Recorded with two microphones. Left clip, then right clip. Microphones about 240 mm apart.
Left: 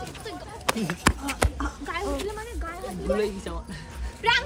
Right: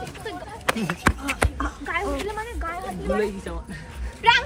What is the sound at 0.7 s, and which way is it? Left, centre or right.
Speech, right.